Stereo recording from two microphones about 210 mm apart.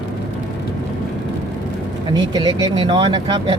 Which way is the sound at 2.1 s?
20° right (ahead or behind).